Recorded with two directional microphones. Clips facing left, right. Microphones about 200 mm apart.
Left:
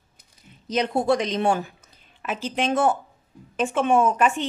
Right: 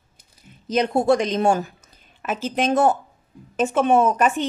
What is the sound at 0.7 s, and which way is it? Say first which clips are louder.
A woman's voice: right 3 dB; 45° right (ahead or behind).